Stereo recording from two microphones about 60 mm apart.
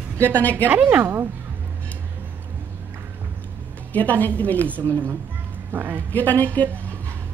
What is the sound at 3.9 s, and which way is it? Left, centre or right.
Speech, left.